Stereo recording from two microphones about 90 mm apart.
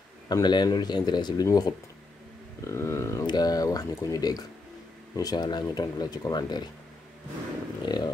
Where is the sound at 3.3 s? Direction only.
45° left (ahead or behind).